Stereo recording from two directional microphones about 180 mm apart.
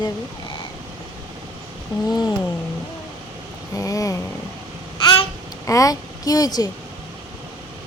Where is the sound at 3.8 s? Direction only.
20° left (ahead or behind).